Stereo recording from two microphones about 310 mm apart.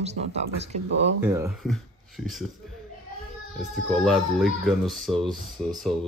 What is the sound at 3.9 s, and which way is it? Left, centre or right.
Speech, centre.